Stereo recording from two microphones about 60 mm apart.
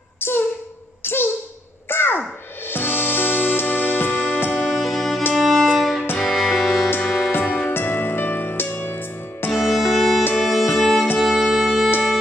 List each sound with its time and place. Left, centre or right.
0.2 s a sound: left
1.9 s music: left
4.7 s music: centre
5.3 s violin: centre
5.8 s music: centre
7.2 s music: left
9.5 s music: centre